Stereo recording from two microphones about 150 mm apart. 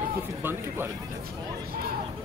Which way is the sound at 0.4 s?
15° right (ahead or behind).